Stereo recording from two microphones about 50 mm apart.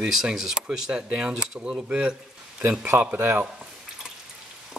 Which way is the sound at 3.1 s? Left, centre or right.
Right.